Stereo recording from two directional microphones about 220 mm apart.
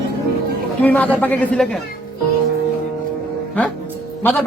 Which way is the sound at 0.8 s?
5° left (ahead or behind).